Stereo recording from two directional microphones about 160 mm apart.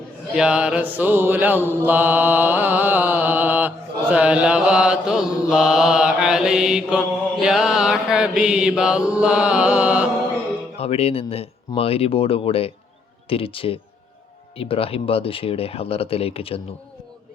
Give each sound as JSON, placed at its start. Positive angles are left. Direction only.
{"t": 0.3, "sound": "mantra", "side_deg": -5}
{"t": 10.8, "sound": "speech", "side_deg": 40}